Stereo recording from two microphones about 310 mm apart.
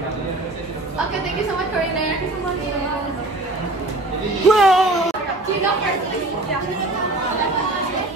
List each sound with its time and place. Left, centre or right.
4.5 s music: centre